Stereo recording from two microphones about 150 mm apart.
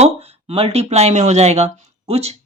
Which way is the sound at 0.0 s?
40° right (ahead or behind).